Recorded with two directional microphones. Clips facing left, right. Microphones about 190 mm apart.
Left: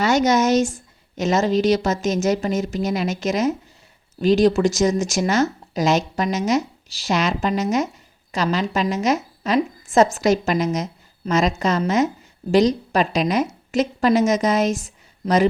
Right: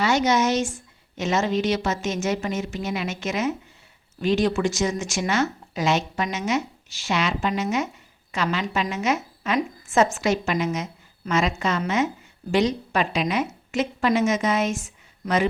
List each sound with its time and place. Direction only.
0.0 s a woman's voice: 40° left (ahead or behind)